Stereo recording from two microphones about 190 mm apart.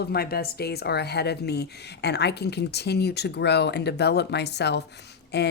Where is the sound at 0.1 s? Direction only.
55° left (ahead or behind).